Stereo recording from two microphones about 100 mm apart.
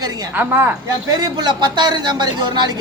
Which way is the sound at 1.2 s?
45° right (ahead or behind).